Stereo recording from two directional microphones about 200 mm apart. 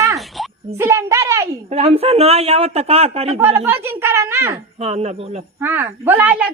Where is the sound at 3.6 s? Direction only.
15° right (ahead or behind).